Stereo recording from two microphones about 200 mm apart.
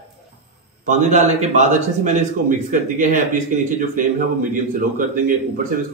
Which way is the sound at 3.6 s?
40° right (ahead or behind).